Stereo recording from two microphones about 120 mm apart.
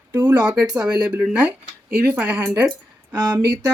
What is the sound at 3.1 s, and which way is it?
Speech, 35° right (ahead or behind).